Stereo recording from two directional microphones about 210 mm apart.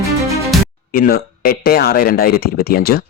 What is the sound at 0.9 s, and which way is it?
Speech, 45° left (ahead or behind).